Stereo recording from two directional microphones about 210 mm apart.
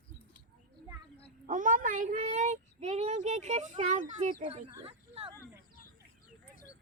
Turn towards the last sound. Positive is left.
turn(degrees=-25)  # may be behind; listen again after turning